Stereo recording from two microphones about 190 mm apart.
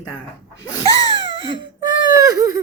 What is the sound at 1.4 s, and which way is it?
Whimper, 25° right (ahead or behind).